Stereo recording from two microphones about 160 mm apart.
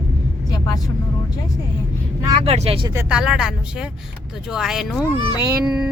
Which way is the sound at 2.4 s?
40° right (ahead or behind).